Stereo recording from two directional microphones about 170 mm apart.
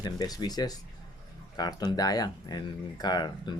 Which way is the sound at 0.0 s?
25° left (ahead or behind).